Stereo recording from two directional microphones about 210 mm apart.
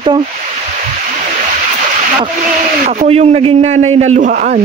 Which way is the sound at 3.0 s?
30° right (ahead or behind).